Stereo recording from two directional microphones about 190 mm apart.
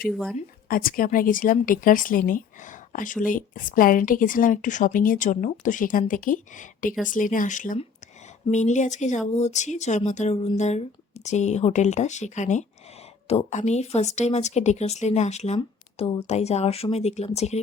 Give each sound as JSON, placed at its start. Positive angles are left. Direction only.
{"t": 0.1, "sound": "speech", "side_deg": 0}
{"t": 0.3, "sound": "speech", "side_deg": 50}